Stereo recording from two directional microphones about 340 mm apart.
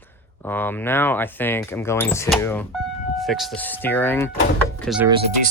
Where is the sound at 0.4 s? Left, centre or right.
Centre.